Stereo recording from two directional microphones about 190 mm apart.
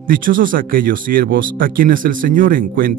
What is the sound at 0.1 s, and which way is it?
Speech, 45° right (ahead or behind).